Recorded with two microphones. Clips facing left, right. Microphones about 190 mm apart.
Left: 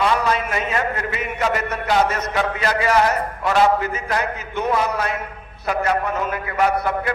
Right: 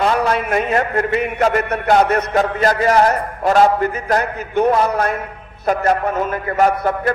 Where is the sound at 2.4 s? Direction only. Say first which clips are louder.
Right 1 dB; 45° right (ahead or behind).